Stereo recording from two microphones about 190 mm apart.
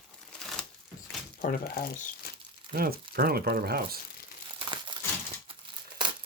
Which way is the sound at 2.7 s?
50° right (ahead or behind).